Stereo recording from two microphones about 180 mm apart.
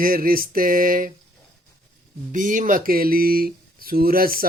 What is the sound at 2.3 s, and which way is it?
Speech, 45° right (ahead or behind).